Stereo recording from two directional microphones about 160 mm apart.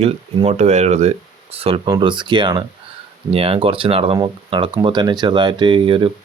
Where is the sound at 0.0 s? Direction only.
40° right (ahead or behind).